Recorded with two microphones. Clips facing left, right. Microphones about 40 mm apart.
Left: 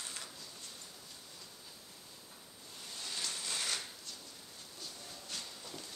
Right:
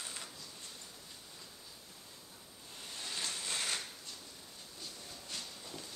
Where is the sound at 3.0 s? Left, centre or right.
Centre.